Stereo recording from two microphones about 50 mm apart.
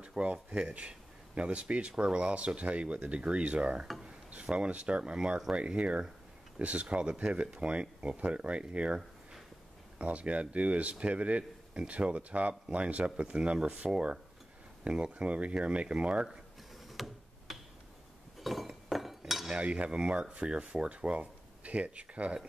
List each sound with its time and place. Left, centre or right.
0.0 s speech: right
16.9 s tick-tock: centre
18.4 s cutlery: centre
19.5 s speech: right